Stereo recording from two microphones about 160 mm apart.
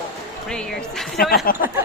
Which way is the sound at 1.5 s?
60° left (ahead or behind).